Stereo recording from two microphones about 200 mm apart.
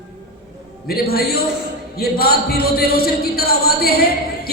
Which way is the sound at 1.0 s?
50° left (ahead or behind).